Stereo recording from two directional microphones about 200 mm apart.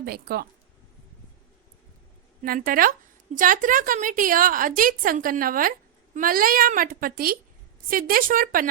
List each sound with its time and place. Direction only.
0.0 s a woman's voice: 50° right (ahead or behind)
2.4 s a woman's voice: 45° right (ahead or behind)